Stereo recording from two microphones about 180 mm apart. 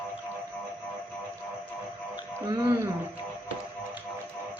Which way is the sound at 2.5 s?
25° right (ahead or behind).